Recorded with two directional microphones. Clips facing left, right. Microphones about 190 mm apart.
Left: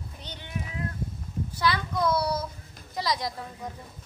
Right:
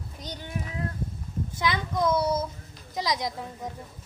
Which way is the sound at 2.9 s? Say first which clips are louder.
Right 1 dB; 20° right (ahead or behind).